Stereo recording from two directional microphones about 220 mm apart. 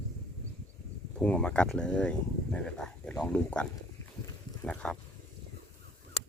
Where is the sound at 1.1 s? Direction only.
5° left (ahead or behind).